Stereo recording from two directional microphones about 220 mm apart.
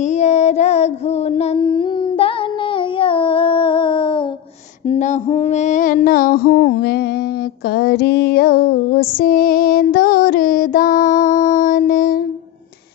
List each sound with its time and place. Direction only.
0.0 s child singing: 30° left (ahead or behind)
4.8 s female singing: 30° left (ahead or behind); by 7.1 s 45° left (ahead or behind)
7.7 s music: 45° left (ahead or behind)